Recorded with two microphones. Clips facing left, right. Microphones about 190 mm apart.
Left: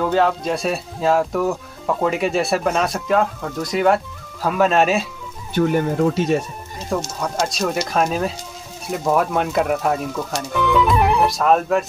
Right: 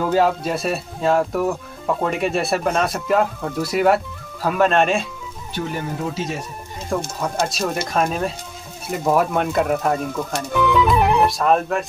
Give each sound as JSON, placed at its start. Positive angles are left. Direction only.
{"t": 0.0, "sound": "speech", "side_deg": -5}
{"t": 5.5, "sound": "speech", "side_deg": 55}
{"t": 7.2, "sound": "speech", "side_deg": 0}